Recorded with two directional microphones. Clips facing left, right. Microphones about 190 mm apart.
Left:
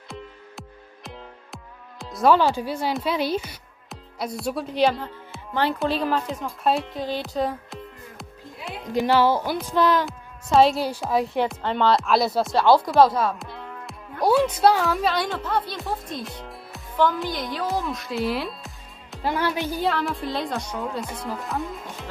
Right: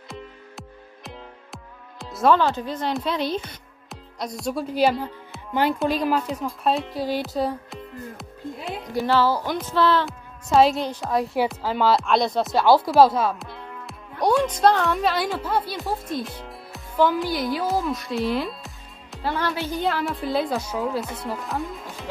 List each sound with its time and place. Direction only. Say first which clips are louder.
0.1 s music: even; centre (ahead or behind)
2.3 s speech: left 1 dB; 10° left (ahead or behind); by 7.2 s 5° right (ahead or behind)
7.3 s music: right 1 dB; centre (ahead or behind)
8.9 s speech: left 2 dB; 15° left (ahead or behind)
10.0 s speech: even; centre (ahead or behind)
13.2 s music: even; centre (ahead or behind)
14.2 s speech: even; 5° left (ahead or behind)
19.2 s speech: left 1 dB; 15° left (ahead or behind)
19.7 s speech: even; centre (ahead or behind)